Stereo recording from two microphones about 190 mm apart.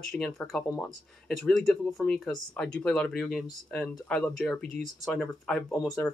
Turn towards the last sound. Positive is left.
turn(degrees=5)  # may be behind; listen again after turning